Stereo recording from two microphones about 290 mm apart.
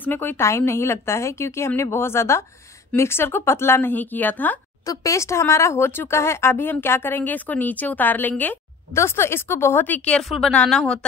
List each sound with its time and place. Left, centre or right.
0.0 s speech: centre